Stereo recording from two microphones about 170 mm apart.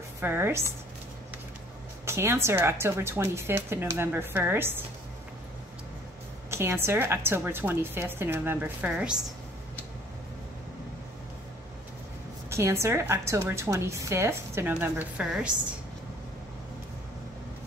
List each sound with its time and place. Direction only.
0.2 s a woman's voice: 15° right (ahead or behind)
2.0 s a woman's voice: 15° right (ahead or behind)
6.5 s a woman's voice: 15° right (ahead or behind)
12.4 s a woman's voice: 15° right (ahead or behind)